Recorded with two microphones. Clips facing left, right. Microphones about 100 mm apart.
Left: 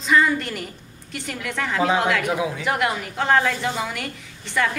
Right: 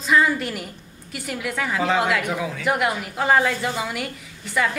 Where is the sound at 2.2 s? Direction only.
15° left (ahead or behind).